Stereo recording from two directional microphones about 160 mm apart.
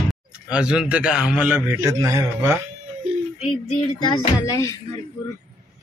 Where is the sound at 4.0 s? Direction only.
25° left (ahead or behind).